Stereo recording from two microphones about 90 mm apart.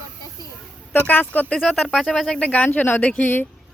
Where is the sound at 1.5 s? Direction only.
5° left (ahead or behind); by 3.5 s 20° left (ahead or behind).